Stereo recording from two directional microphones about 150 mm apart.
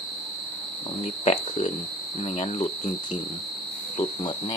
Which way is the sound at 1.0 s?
45° left (ahead or behind).